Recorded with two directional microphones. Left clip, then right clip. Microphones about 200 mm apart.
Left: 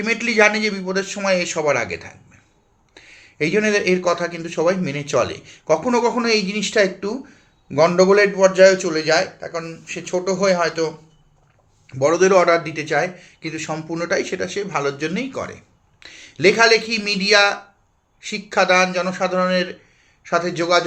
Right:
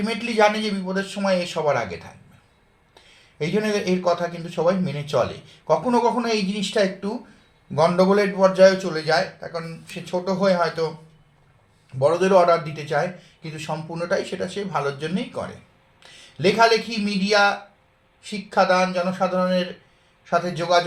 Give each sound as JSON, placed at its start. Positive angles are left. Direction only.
{"t": 0.0, "sound": "a man's voice", "side_deg": 10}
{"t": 12.3, "sound": "speech", "side_deg": 10}